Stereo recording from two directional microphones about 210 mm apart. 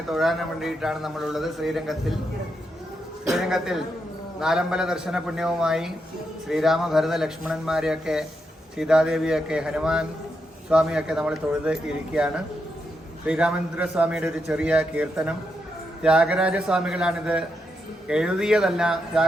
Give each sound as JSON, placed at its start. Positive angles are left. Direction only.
{"t": 0.1, "sound": "a man's voice", "side_deg": 0}
{"t": 3.2, "sound": "a man's voice", "side_deg": 0}